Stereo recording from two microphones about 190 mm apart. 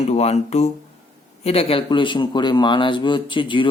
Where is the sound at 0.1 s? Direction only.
35° left (ahead or behind).